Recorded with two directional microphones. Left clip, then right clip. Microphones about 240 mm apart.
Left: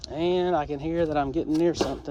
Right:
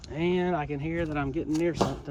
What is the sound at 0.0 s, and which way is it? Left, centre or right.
Speech, centre.